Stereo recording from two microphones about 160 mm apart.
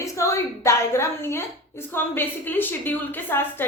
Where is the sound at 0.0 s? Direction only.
20° left (ahead or behind).